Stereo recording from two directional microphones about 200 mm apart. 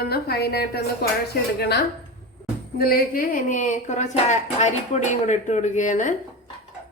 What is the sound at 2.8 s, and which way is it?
Speech, 45° left (ahead or behind).